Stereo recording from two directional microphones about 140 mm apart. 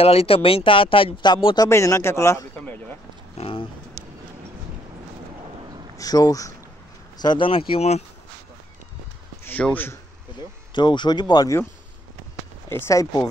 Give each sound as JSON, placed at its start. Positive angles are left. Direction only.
{"t": 0.0, "sound": "speech", "side_deg": 45}
{"t": 1.7, "sound": "speech", "side_deg": 20}
{"t": 2.5, "sound": "a sound", "side_deg": 10}
{"t": 3.3, "sound": "speech", "side_deg": 40}
{"t": 5.9, "sound": "speech", "side_deg": 25}
{"t": 9.4, "sound": "a man's voice", "side_deg": 10}
{"t": 10.7, "sound": "speech", "side_deg": 35}
{"t": 12.6, "sound": "speech", "side_deg": 20}